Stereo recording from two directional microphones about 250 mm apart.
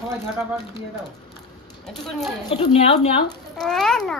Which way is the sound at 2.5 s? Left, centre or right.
Left.